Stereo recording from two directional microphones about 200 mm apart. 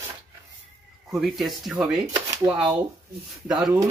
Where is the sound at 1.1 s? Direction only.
Centre (ahead or behind).